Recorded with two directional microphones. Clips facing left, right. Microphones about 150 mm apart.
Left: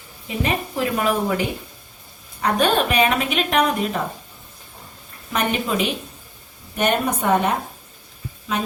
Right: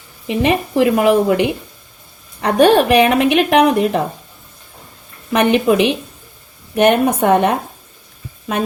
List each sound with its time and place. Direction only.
0.3 s a woman's voice: 75° right (ahead or behind)
5.3 s a woman's voice: 70° right (ahead or behind)
6.7 s speech: 65° right (ahead or behind)